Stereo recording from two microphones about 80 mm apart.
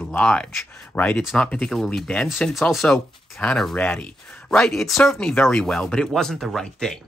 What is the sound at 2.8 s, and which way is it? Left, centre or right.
Speech, centre.